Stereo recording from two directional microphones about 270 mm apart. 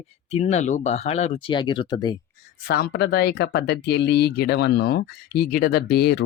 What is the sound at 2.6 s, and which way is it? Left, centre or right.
Speech, left.